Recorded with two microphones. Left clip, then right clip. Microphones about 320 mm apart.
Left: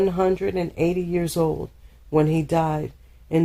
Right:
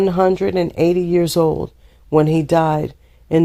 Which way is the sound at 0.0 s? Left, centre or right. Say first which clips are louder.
Right 6 dB; right.